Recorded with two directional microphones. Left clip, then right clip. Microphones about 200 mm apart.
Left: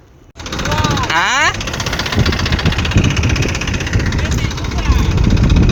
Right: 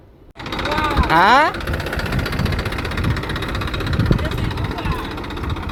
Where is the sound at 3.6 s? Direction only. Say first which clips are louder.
Left 4 dB; 35° right (ahead or behind).